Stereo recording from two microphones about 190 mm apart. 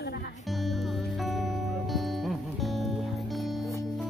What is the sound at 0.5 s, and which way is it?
Music, centre (ahead or behind).